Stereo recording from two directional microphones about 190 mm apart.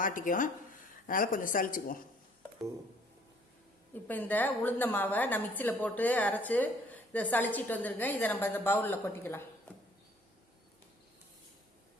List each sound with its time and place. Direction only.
0.0 s speech: 45° left (ahead or behind)
4.0 s a woman's voice: 10° left (ahead or behind)